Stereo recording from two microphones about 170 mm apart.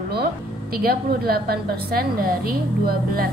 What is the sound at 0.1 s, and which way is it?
A woman's voice, 65° right (ahead or behind).